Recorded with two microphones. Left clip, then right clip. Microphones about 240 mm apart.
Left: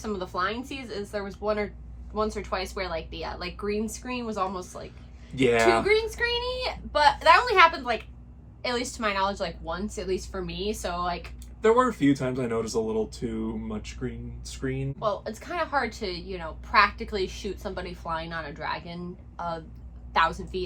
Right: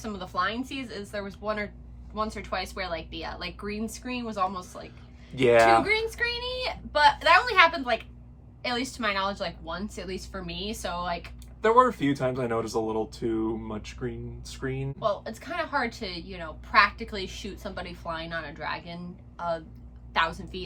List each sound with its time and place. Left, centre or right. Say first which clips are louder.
0.0 s a woman's voice: even; centre
5.3 s speech: right 2 dB; centre
5.8 s a woman's voice: left 2 dB; centre
11.6 s speech: right 1 dB; centre
14.9 s a woman's voice: right 1 dB; centre